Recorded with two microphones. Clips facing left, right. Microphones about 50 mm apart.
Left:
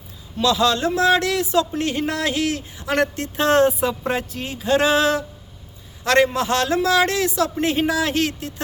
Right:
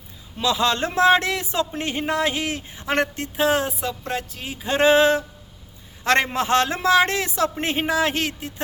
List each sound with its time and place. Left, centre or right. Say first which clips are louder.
0.3 s speech: left 3 dB; right
3.2 s speech: left 4 dB; centre
4.6 s speech: right 1 dB; right